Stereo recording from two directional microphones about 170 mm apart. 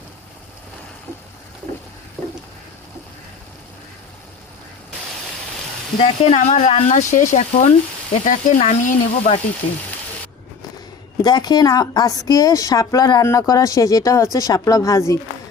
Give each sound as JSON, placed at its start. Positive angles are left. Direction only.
{"t": 6.0, "sound": "speech", "side_deg": 40}
{"t": 11.2, "sound": "a woman's voice", "side_deg": 25}